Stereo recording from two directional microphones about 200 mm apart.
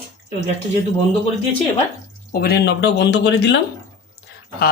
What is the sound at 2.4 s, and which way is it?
Speech, 55° left (ahead or behind).